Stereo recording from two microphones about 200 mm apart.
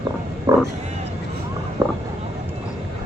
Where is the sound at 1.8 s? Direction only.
15° right (ahead or behind).